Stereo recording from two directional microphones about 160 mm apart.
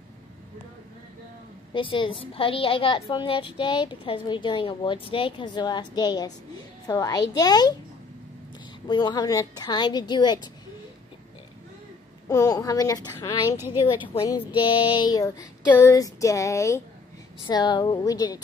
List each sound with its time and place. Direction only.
1.7 s a woman's voice: 30° left (ahead or behind)
8.8 s a woman's voice: 25° left (ahead or behind)
12.3 s a woman's voice: 20° left (ahead or behind)